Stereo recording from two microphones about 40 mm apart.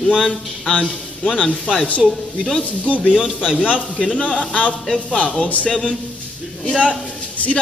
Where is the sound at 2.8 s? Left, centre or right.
Left.